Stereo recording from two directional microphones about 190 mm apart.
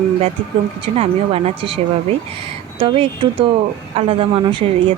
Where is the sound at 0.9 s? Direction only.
30° right (ahead or behind).